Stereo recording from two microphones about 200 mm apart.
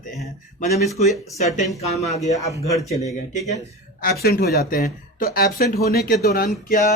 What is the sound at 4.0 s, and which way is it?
Speech, 50° left (ahead or behind).